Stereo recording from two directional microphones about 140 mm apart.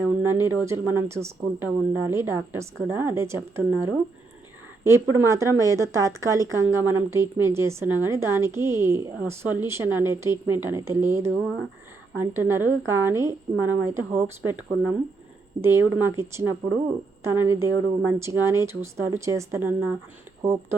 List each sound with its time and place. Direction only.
0.2 s speech: 15° right (ahead or behind)